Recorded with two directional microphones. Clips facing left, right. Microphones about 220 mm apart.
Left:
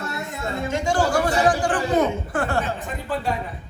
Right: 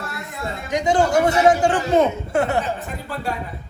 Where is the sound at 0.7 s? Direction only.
20° right (ahead or behind).